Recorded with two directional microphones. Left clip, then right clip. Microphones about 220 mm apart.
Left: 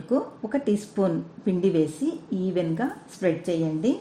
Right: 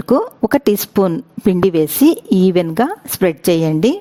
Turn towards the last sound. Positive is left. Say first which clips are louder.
# right 11 dB
turn(degrees=-50)  # may be behind; listen again after turning